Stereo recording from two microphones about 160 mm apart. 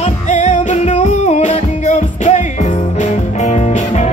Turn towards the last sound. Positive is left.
turn(degrees=45)  # may be behind; listen again after turning